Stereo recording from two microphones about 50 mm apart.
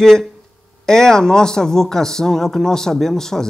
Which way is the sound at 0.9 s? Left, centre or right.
Centre.